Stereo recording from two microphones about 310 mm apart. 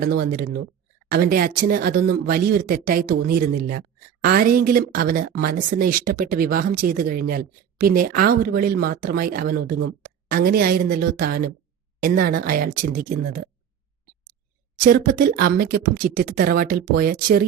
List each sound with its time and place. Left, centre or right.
0.0 s speech: right
14.8 s speech: right